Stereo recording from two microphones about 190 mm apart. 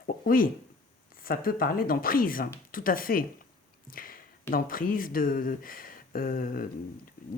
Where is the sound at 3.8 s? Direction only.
50° left (ahead or behind).